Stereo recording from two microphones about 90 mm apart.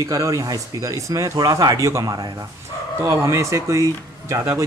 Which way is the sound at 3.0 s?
35° right (ahead or behind).